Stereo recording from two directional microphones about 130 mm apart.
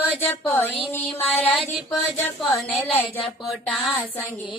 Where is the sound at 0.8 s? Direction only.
15° left (ahead or behind).